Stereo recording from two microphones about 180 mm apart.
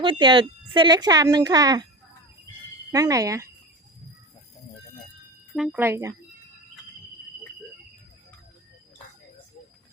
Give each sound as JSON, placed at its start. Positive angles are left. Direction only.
{"t": 0.0, "sound": "speech", "side_deg": -30}
{"t": 2.9, "sound": "speech", "side_deg": -20}
{"t": 5.5, "sound": "speech", "side_deg": -5}
{"t": 5.8, "sound": "speech", "side_deg": -15}